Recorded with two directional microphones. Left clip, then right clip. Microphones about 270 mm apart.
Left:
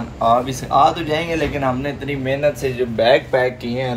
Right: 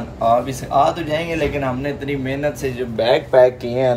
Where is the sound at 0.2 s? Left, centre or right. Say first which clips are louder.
Even; centre.